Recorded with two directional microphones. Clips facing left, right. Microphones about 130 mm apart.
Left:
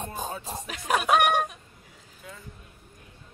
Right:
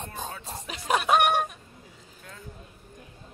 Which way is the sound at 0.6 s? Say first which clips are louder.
Right 1 dB; centre (ahead or behind).